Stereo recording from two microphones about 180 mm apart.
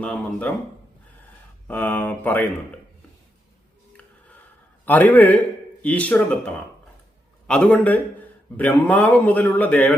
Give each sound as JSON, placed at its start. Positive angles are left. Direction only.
{"t": 0.0, "sound": "a man's voice", "side_deg": 5}
{"t": 1.6, "sound": "a man's voice", "side_deg": 10}
{"t": 4.9, "sound": "a man's voice", "side_deg": 10}